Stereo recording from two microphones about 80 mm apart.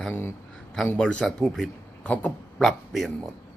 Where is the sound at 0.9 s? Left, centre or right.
Centre.